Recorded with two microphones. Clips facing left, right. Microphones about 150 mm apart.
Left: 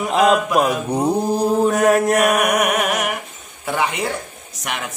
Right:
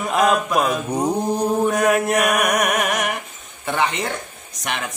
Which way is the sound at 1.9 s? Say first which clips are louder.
Left 3 dB; 35° left (ahead or behind).